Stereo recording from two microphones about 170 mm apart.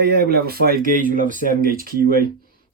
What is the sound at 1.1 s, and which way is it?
Speech, 50° right (ahead or behind).